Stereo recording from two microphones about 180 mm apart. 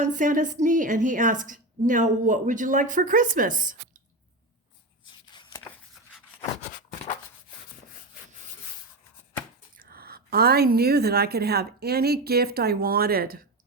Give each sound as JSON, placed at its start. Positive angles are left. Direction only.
{"t": 0.0, "sound": "a woman's voice", "side_deg": -45}
{"t": 5.0, "sound": "a sound", "side_deg": 25}
{"t": 9.7, "sound": "a woman's voice", "side_deg": -55}